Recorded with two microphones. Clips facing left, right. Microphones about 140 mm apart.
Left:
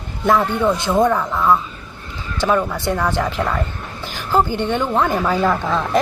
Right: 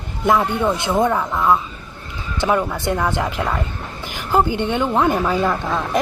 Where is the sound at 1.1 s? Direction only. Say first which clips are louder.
Left 1 dB; 5° right (ahead or behind).